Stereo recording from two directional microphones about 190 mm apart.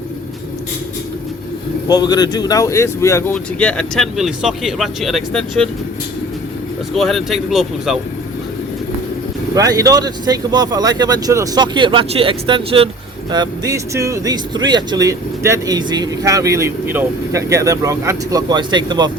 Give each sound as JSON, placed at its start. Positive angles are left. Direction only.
{"t": 1.9, "sound": "speech", "side_deg": 20}
{"t": 6.9, "sound": "speech", "side_deg": 0}
{"t": 9.6, "sound": "speech", "side_deg": -20}